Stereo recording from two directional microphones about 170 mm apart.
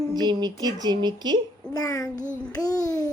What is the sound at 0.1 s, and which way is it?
Speech, 25° right (ahead or behind).